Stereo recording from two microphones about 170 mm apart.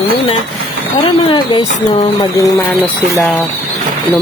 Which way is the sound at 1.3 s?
30° left (ahead or behind).